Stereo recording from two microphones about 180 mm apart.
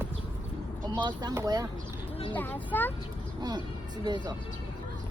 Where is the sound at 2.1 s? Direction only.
30° left (ahead or behind).